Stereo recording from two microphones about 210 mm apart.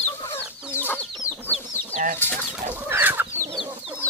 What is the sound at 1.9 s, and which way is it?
Chicken, 35° right (ahead or behind).